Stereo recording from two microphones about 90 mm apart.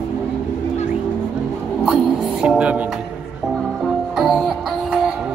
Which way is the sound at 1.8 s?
10° right (ahead or behind).